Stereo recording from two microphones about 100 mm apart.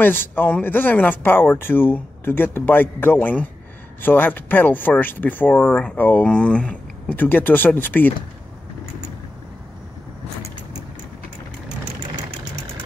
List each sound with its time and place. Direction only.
0.0 s speech: 20° left (ahead or behind)